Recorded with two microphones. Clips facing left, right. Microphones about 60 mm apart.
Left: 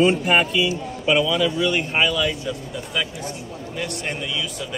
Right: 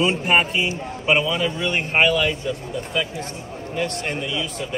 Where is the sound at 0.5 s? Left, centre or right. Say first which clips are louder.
Left 2 dB; right.